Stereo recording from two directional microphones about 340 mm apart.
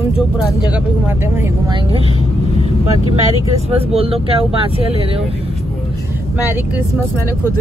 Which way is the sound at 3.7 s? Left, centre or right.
Centre.